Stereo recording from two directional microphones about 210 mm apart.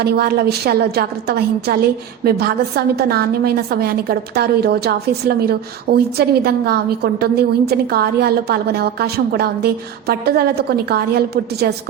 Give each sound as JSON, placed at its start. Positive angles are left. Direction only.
{"t": 0.0, "sound": "a woman's voice", "side_deg": -50}